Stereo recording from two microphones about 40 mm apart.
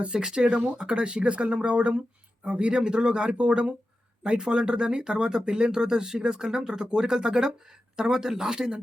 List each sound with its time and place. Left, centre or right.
0.0 s speech: right